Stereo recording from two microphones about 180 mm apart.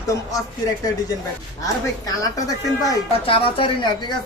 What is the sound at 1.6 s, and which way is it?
Speech, 20° left (ahead or behind).